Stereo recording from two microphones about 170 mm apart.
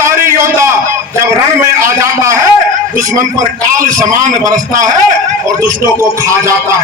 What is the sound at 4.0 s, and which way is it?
Speech, 20° right (ahead or behind).